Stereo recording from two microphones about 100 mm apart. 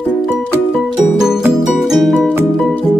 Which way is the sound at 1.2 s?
5° right (ahead or behind).